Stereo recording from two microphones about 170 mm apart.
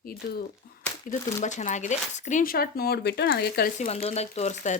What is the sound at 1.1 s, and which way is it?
Speech, 45° left (ahead or behind).